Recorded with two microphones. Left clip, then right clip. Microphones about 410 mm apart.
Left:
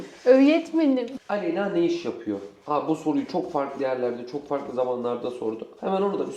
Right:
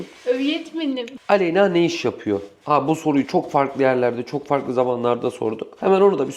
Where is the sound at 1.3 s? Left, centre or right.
Right.